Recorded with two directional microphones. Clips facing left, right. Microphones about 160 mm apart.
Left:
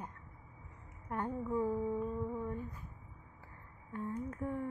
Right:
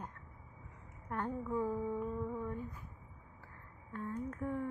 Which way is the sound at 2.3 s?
5° left (ahead or behind).